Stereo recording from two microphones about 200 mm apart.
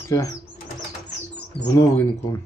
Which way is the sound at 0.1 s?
15° left (ahead or behind).